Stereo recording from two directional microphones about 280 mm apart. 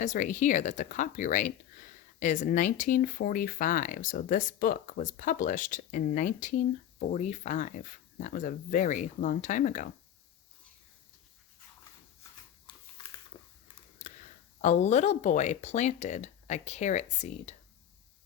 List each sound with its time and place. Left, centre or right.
0.0 s speech: left
13.3 s a sound: centre
14.6 s speech: left